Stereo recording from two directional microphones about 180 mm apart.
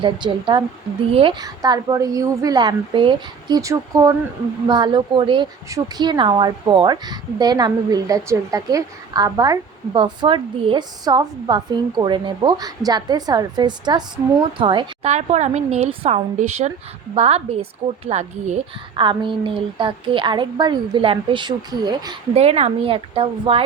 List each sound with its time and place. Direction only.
0.0 s speech: 25° right (ahead or behind)
15.1 s a woman's voice: 40° right (ahead or behind)
18.9 s speech: 25° right (ahead or behind)
22.4 s a woman's voice: 35° right (ahead or behind)